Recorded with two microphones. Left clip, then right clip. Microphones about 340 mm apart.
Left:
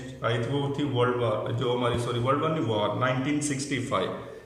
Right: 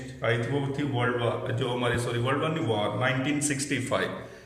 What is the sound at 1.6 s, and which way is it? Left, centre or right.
Mantra, right.